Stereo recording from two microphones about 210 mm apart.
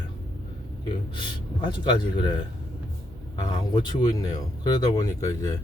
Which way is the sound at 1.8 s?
20° left (ahead or behind).